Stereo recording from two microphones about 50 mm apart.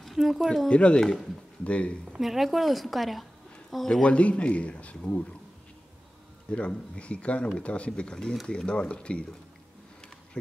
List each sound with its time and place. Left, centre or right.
0.0 s a sound: centre
0.7 s a man's voice: left
2.1 s a woman's voice: centre
4.0 s a man's voice: left
6.5 s a man's voice: left